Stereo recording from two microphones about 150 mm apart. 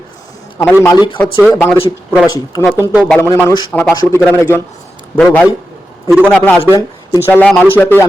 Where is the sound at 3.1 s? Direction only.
15° left (ahead or behind).